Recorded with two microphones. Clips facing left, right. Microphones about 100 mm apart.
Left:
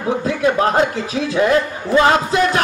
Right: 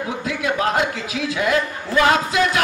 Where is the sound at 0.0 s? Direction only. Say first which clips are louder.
Left 7 dB; 35° left (ahead or behind).